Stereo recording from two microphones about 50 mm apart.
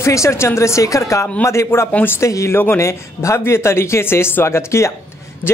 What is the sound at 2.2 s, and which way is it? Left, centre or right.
Speech, left.